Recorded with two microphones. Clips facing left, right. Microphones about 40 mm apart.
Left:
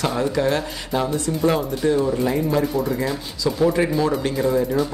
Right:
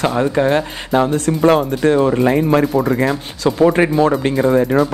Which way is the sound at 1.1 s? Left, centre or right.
Right.